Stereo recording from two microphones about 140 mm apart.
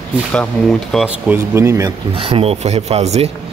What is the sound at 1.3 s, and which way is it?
Speech, 20° right (ahead or behind).